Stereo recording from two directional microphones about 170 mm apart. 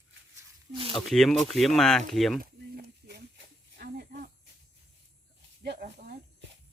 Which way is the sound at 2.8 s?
70° right (ahead or behind).